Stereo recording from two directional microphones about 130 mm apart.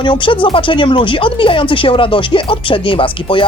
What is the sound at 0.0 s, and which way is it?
Speech, 40° left (ahead or behind).